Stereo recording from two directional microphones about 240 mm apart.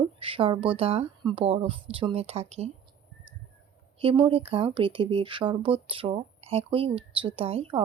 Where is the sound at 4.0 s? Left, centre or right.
Right.